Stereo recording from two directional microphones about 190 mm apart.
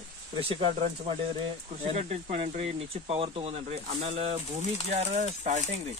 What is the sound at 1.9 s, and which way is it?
Speech, 35° right (ahead or behind).